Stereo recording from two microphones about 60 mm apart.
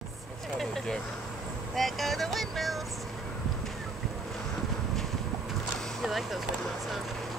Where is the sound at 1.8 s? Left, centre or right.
Centre.